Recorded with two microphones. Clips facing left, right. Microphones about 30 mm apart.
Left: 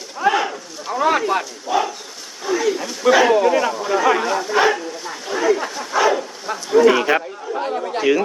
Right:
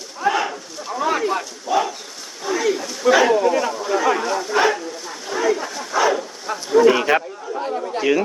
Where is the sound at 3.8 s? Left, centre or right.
Centre.